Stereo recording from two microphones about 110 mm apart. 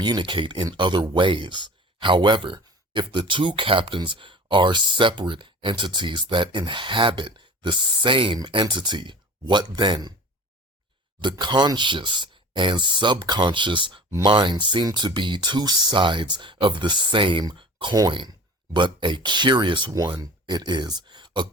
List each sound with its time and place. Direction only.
0.0 s speech: 45° right (ahead or behind)
11.2 s speech: 45° right (ahead or behind)